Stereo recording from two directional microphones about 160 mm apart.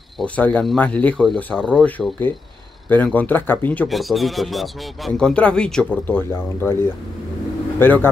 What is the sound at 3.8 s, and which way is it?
Speech, centre (ahead or behind).